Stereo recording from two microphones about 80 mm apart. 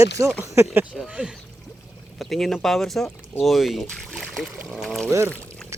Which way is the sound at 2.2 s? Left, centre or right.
Centre.